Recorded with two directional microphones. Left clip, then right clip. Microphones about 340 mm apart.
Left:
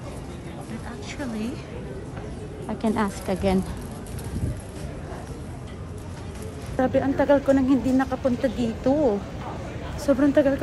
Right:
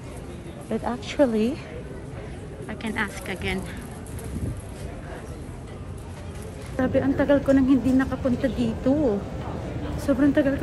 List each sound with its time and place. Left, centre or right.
0.8 s speech: centre
2.7 s a woman's voice: centre
6.8 s speech: centre
9.9 s a woman's voice: centre